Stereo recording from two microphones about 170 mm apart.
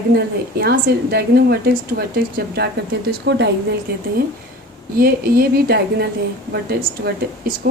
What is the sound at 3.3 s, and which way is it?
Speech, 90° right.